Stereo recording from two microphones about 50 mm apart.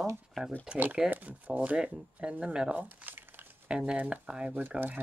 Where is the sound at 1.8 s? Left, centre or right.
Right.